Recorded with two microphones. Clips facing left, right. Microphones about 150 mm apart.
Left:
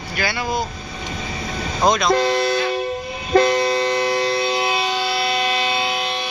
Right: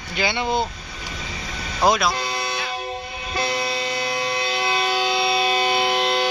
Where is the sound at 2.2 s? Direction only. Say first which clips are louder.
Left 9 dB; 45° left (ahead or behind).